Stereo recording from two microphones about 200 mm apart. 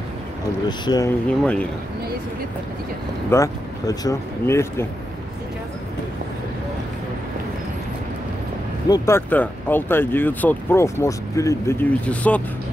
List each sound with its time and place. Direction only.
0.7 s speech: 20° left (ahead or behind)
1.4 s speech: 5° left (ahead or behind)
3.3 s speech: 15° left (ahead or behind)
8.8 s speech: 15° left (ahead or behind)